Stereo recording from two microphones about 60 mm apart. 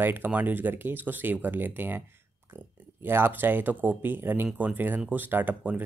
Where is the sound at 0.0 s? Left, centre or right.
Right.